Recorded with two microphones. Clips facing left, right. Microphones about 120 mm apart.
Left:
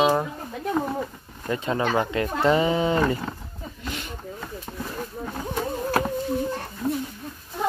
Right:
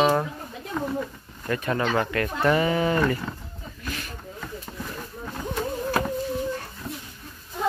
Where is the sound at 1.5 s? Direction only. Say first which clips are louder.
Left 1 dB; 20° left (ahead or behind).